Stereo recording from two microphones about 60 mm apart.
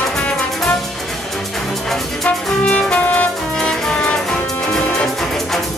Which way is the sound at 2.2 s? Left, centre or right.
Centre.